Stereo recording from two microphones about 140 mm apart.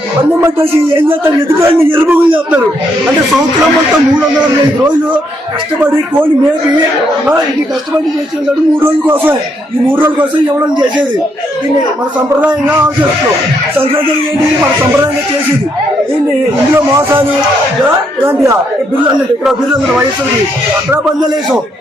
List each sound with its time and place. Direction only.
1.2 s a man's voice: 15° right (ahead or behind)
9.9 s a man's voice: 15° right (ahead or behind)
16.7 s a man's voice: 15° right (ahead or behind)